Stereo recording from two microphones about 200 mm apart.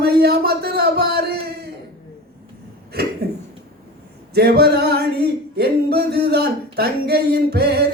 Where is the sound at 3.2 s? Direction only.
55° right (ahead or behind).